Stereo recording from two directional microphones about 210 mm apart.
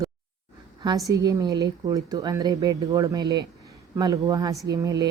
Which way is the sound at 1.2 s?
15° right (ahead or behind).